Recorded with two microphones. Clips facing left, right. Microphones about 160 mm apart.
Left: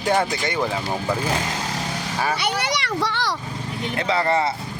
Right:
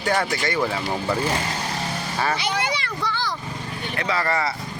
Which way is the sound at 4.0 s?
25° left (ahead or behind).